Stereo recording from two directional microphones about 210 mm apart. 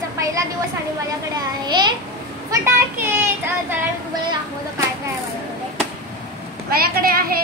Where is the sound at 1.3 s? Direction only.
20° right (ahead or behind).